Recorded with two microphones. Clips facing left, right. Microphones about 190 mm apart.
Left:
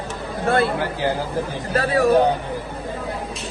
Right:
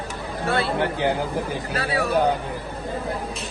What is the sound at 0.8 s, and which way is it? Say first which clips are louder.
Speech: right 1 dB; 20° right (ahead or behind).